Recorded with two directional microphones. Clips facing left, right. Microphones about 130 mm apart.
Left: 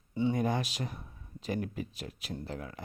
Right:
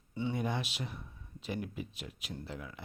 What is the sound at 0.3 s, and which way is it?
Speech, 45° left (ahead or behind).